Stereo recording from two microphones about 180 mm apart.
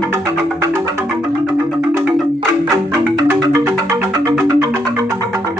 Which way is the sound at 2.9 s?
15° right (ahead or behind).